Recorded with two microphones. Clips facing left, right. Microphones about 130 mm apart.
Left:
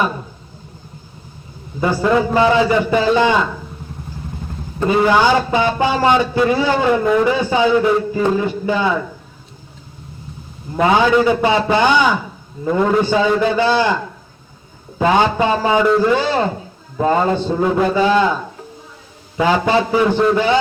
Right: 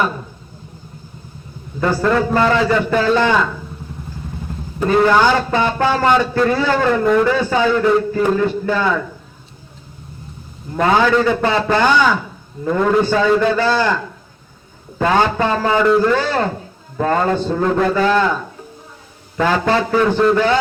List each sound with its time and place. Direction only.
1.8 s speech: 10° left (ahead or behind)
4.9 s speech: 10° left (ahead or behind)
10.8 s speech: 10° left (ahead or behind)
19.4 s speech: 15° left (ahead or behind)